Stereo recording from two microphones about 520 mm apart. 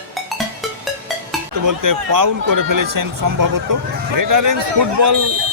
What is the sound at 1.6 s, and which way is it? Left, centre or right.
Speech, right.